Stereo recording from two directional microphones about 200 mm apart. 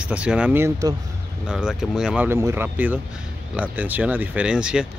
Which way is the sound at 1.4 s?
5° right (ahead or behind).